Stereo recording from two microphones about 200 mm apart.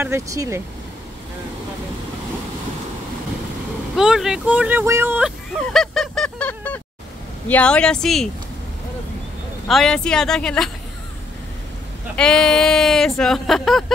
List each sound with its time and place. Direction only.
0.0 s speech: 15° right (ahead or behind)
3.9 s speech: centre (ahead or behind)
5.7 s honk: centre (ahead or behind)
7.4 s speech: 5° left (ahead or behind)
9.7 s speech: centre (ahead or behind)
12.2 s speech: 5° left (ahead or behind)